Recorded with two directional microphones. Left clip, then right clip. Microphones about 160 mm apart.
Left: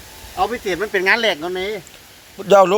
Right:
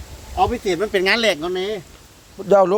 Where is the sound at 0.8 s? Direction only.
60° right (ahead or behind).